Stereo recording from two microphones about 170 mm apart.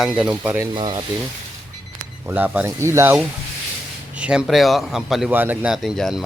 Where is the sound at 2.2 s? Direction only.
10° right (ahead or behind).